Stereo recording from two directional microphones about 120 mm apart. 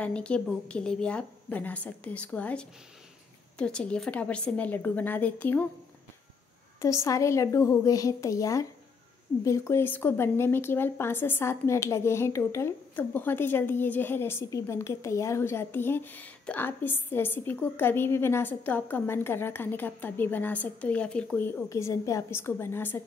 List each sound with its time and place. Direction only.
0.0 s speech: 10° left (ahead or behind)
6.8 s a woman's voice: 25° left (ahead or behind)